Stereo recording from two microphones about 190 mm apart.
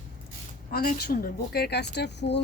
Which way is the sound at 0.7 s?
50° left (ahead or behind).